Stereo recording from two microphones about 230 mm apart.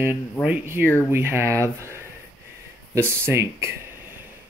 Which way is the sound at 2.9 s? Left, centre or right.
Centre.